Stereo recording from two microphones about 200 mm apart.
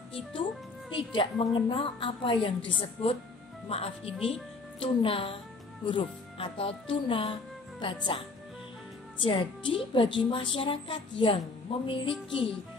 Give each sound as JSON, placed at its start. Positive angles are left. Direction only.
{"t": 0.1, "sound": "a woman's voice", "side_deg": 25}
{"t": 9.2, "sound": "a woman's voice", "side_deg": 25}